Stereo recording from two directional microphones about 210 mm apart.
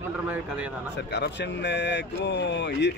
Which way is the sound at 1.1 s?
55° left (ahead or behind).